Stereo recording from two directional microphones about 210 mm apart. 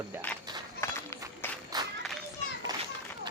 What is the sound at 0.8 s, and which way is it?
Run, 15° left (ahead or behind).